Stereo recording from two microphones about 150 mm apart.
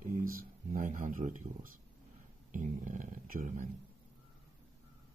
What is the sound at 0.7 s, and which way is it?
Speech, 60° right (ahead or behind).